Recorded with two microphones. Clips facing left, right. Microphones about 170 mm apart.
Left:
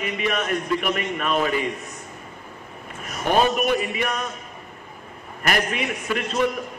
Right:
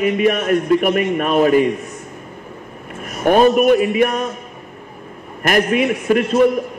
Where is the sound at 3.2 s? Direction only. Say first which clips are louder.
Right 8 dB; 50° right (ahead or behind).